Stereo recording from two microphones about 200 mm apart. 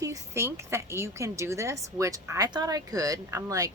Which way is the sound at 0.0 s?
15° right (ahead or behind).